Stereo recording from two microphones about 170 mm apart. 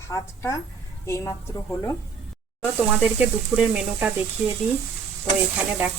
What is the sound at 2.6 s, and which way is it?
Speech, 10° right (ahead or behind).